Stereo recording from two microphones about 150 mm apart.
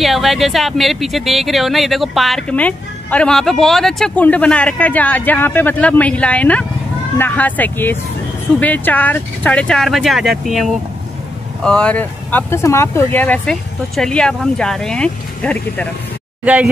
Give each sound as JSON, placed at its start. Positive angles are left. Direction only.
{"t": 0.0, "sound": "speech", "side_deg": 0}
{"t": 16.4, "sound": "speech", "side_deg": -10}